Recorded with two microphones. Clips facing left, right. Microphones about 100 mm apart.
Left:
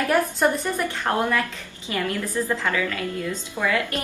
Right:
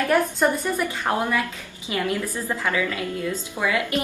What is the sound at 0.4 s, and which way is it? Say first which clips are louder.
A woman's voice: even; 10° right (ahead or behind).